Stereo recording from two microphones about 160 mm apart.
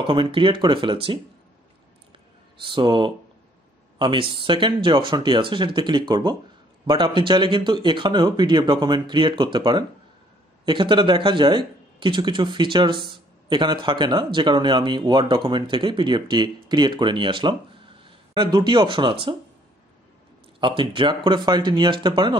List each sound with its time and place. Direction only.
0.0 s speech: 30° right (ahead or behind)
2.6 s speech: 30° right (ahead or behind)
20.6 s speech: 30° right (ahead or behind)